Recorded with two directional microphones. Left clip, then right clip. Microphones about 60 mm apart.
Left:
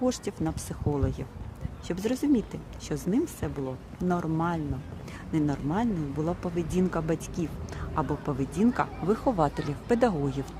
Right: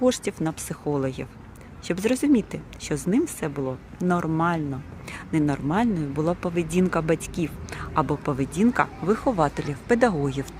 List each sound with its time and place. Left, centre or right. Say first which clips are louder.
0.0 s speech: right 6 dB; right; by 8.9 s centre
9.0 s speech: even; centre